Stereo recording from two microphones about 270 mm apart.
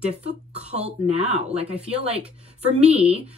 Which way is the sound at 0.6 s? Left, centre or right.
Right.